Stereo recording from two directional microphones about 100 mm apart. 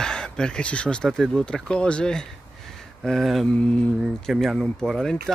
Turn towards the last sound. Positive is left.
turn(degrees=5)  # may be behind; listen again after turning